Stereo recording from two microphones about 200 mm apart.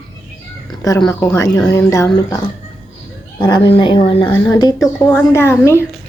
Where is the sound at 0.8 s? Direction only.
20° left (ahead or behind).